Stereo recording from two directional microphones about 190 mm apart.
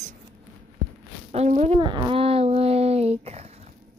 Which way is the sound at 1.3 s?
35° right (ahead or behind).